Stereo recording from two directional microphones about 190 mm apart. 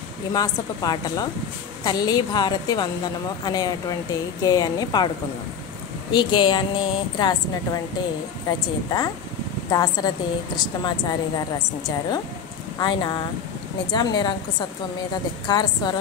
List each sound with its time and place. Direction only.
0.3 s a woman's voice: 20° left (ahead or behind)
6.1 s a woman's voice: 25° left (ahead or behind)
8.5 s a woman's voice: 20° left (ahead or behind)
12.7 s a woman's voice: 20° left (ahead or behind)
15.4 s a woman's voice: 20° left (ahead or behind)